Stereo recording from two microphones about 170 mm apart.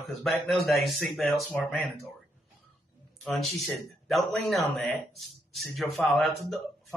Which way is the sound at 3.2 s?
5° left (ahead or behind).